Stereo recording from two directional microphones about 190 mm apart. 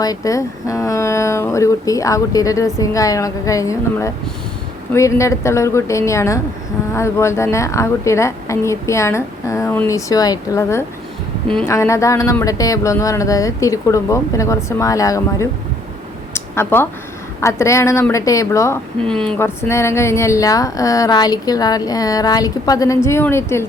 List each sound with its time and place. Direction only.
0.0 s speech: 20° left (ahead or behind)
16.3 s a sound: 10° left (ahead or behind)
17.4 s speech: 15° left (ahead or behind)
19.0 s speech: 5° left (ahead or behind)